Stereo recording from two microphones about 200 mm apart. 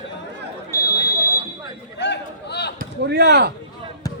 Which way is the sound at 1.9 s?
60° left (ahead or behind).